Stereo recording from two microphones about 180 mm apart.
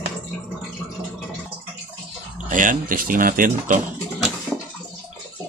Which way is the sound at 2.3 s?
45° right (ahead or behind).